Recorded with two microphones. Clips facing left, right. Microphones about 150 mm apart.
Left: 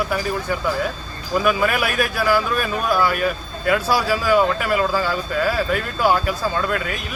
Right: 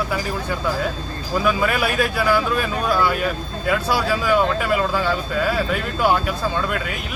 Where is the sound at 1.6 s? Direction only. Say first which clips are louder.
Even; 5° left (ahead or behind).